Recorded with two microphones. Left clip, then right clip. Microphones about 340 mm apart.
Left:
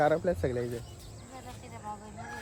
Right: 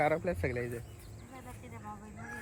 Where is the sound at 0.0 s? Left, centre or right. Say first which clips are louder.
Left 4 dB; centre.